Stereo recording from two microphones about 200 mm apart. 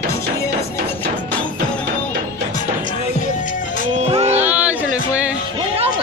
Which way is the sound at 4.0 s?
30° right (ahead or behind).